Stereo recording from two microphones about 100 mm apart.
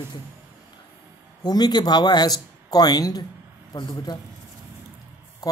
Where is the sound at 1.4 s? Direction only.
45° left (ahead or behind).